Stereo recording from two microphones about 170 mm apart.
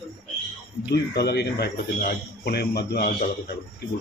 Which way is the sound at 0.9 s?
75° left (ahead or behind).